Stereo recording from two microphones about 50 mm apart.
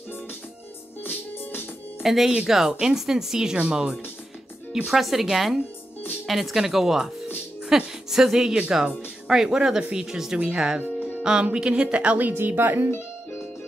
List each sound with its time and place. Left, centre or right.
1.0 s music: left
2.0 s a woman's voice: centre; by 12.9 s right
12.9 s music: left